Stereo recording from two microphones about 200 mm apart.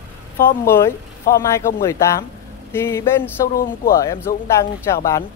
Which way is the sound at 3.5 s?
45° left (ahead or behind).